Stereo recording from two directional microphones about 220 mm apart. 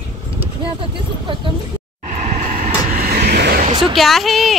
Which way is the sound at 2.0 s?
35° right (ahead or behind).